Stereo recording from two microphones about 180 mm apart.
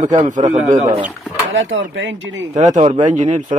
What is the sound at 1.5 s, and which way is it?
Speech, 90° right.